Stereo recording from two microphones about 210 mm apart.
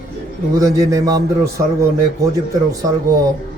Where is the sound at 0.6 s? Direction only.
15° right (ahead or behind).